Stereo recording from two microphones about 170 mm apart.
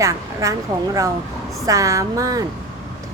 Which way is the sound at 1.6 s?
20° right (ahead or behind).